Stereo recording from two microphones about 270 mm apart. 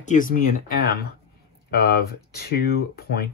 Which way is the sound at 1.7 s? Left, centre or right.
Left.